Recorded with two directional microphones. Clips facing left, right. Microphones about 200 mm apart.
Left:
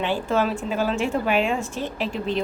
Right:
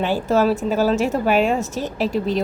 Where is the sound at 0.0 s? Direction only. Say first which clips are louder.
Right 5 dB; 40° right (ahead or behind).